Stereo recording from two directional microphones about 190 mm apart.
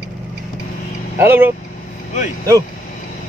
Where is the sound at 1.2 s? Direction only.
10° right (ahead or behind).